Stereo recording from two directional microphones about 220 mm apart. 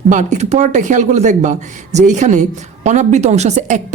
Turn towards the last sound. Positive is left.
turn(degrees=-35)  # may be behind; listen again after turning